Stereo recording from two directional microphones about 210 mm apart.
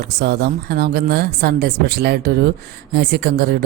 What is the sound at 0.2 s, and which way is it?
Speech, 50° right (ahead or behind).